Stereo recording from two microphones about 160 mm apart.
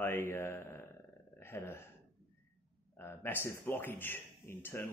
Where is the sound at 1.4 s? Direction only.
15° left (ahead or behind).